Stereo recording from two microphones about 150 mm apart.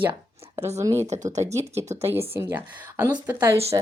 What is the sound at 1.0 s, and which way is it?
Speech, 50° right (ahead or behind).